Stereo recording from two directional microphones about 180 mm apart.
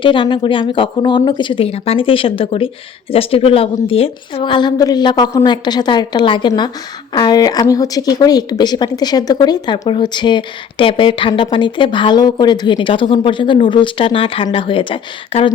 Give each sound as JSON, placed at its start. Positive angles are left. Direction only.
{"t": 0.0, "sound": "speech", "side_deg": 25}